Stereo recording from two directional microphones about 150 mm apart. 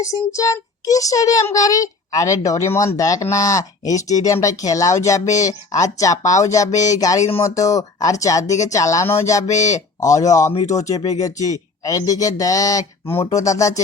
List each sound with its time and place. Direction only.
0.0 s a child's voice: 20° left (ahead or behind)
9.6 s speech: 50° left (ahead or behind)
10.0 s a child's voice: 20° left (ahead or behind)